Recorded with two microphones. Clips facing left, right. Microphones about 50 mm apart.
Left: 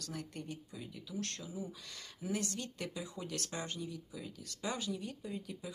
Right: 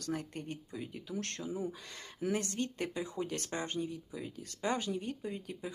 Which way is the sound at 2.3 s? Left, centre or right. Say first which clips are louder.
Right 1 dB; right.